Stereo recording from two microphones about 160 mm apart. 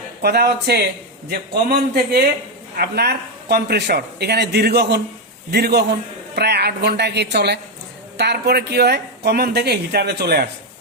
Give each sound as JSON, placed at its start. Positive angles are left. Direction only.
{"t": 0.2, "sound": "a man's voice", "side_deg": -85}
{"t": 1.3, "sound": "a man's voice", "side_deg": -75}